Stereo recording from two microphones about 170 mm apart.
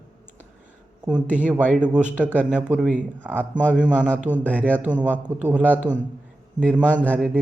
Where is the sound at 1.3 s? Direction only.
10° right (ahead or behind).